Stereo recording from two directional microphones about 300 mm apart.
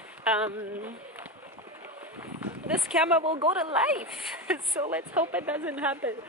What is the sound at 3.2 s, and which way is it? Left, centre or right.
Speech, centre.